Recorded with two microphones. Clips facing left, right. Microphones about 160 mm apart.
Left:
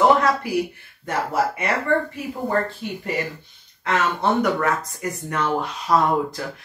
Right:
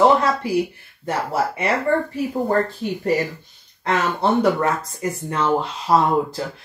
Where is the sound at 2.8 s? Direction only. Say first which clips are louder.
Right 6 dB; 40° right (ahead or behind).